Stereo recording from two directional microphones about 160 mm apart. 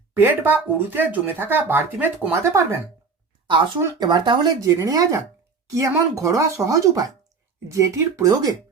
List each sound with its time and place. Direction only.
0.2 s speech: 10° right (ahead or behind)
3.8 s speech: 25° right (ahead or behind)